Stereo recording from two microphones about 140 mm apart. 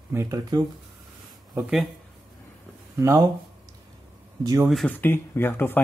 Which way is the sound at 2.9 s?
20° right (ahead or behind).